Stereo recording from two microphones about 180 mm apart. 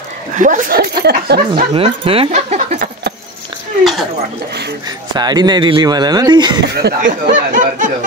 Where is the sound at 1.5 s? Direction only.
30° right (ahead or behind).